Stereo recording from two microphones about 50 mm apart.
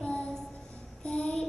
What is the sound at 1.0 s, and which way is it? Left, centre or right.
Child singing, centre.